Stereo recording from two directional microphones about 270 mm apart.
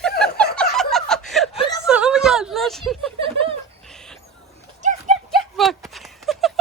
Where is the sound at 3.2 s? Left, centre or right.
Centre.